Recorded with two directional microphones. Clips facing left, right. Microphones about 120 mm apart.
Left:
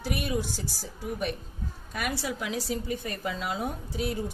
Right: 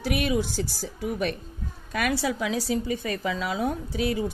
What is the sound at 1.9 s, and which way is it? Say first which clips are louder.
Speech: right 6 dB; 90° right.